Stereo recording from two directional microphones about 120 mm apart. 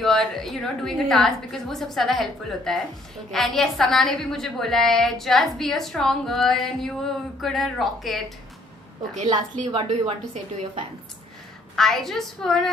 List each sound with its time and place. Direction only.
0.0 s a woman's voice: centre (ahead or behind)
9.8 s a woman's voice: 65° right (ahead or behind)
11.7 s a woman's voice: 5° left (ahead or behind)